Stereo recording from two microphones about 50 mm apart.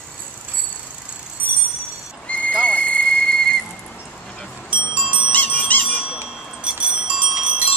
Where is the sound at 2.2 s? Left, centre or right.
Left.